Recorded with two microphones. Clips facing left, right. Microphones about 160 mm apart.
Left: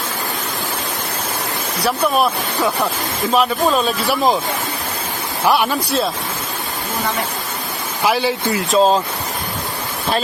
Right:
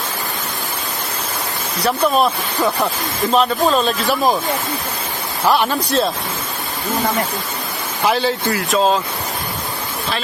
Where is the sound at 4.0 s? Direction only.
20° left (ahead or behind).